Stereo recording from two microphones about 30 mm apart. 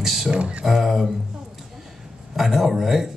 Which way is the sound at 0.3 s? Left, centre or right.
Right.